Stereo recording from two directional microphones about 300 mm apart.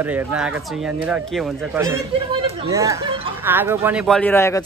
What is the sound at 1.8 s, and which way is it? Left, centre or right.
Speech, centre.